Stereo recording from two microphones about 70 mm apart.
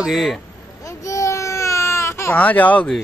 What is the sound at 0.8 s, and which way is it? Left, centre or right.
Baby cry, left.